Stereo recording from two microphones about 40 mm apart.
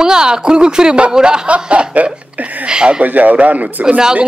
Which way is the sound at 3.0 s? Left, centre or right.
Right.